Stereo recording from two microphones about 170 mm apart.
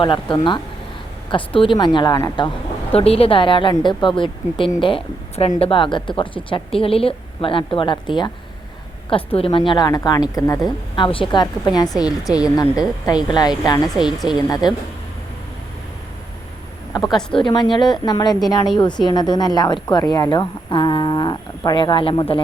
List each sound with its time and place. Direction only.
0.0 s speech: 30° left (ahead or behind)
2.9 s a woman's voice: 35° left (ahead or behind); by 10.6 s 20° left (ahead or behind)
10.9 s speech: 30° left (ahead or behind)
13.8 s speech: centre (ahead or behind)
14.6 s speech: 25° left (ahead or behind)
17.0 s speech: centre (ahead or behind)
17.4 s speech: 30° left (ahead or behind)